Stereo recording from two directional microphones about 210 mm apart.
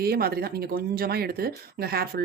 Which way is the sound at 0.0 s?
45° right (ahead or behind).